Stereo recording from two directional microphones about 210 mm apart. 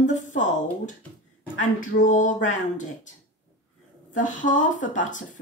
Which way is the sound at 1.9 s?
35° left (ahead or behind).